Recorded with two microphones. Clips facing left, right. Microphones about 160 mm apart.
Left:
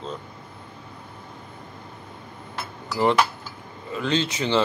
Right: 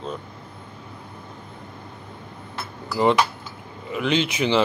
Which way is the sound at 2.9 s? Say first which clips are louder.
Right 1 dB; 15° right (ahead or behind).